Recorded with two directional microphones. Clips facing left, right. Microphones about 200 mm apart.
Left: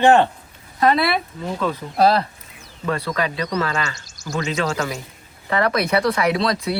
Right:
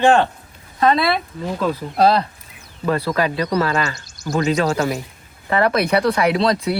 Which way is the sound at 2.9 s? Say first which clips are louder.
Right 4 dB; 35° right (ahead or behind).